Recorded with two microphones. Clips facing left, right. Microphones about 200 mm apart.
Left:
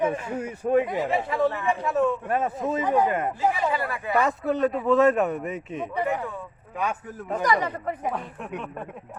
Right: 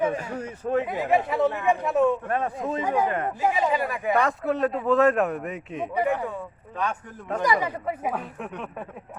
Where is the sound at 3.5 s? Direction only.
15° right (ahead or behind).